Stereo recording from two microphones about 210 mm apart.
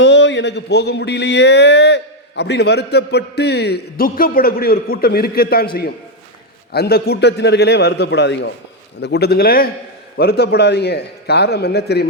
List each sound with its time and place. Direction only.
0.0 s speech: 60° left (ahead or behind)
6.7 s speech: 50° left (ahead or behind)